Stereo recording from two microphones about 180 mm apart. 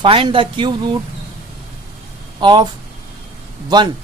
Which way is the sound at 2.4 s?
25° right (ahead or behind).